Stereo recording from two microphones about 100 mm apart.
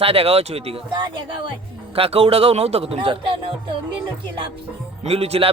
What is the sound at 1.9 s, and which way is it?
Speech, 80° right.